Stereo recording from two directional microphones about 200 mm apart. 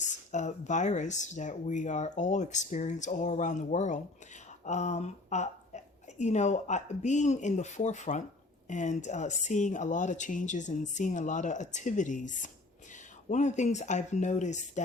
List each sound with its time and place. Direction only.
0.3 s a woman's voice: 35° left (ahead or behind)